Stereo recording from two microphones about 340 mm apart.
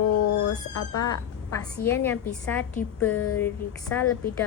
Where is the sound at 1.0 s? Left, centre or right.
Centre.